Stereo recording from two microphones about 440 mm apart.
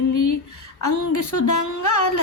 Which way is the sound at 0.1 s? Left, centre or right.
Left.